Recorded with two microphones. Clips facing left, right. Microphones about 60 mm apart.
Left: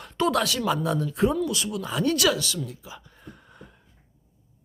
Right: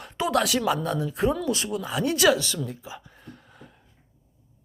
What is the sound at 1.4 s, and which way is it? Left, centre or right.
Speech, right.